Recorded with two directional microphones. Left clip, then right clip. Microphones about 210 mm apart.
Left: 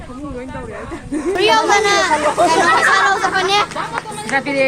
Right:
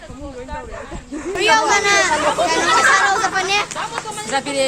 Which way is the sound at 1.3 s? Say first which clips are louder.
Left 1 dB; centre (ahead or behind).